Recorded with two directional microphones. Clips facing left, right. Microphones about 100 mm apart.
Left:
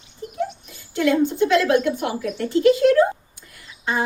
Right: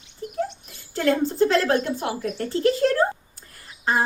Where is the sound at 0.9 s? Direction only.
35° right (ahead or behind).